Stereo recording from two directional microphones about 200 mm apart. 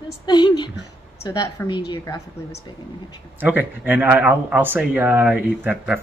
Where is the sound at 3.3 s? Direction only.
10° right (ahead or behind).